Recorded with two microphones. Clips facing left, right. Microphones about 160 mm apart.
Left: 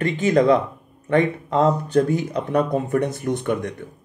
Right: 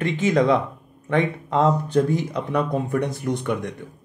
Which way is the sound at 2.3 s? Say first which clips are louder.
Left 3 dB; 45° left (ahead or behind).